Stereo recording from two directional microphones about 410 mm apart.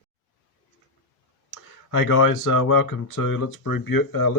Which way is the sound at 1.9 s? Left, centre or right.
Left.